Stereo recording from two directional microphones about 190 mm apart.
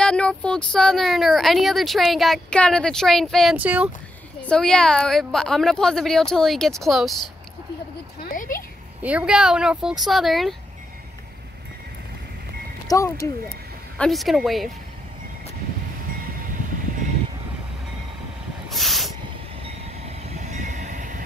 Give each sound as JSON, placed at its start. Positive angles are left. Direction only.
{"t": 0.0, "sound": "speech", "side_deg": 5}
{"t": 4.4, "sound": "speech", "side_deg": 5}
{"t": 8.2, "sound": "a sound", "side_deg": 45}
{"t": 9.0, "sound": "speech", "side_deg": -5}
{"t": 12.8, "sound": "speech", "side_deg": 15}
{"t": 13.9, "sound": "speech", "side_deg": 0}
{"t": 18.7, "sound": "hiss", "side_deg": 0}
{"t": 20.2, "sound": "train", "side_deg": -35}